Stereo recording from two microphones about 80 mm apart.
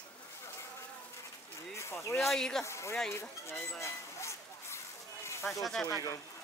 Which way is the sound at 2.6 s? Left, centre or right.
Left.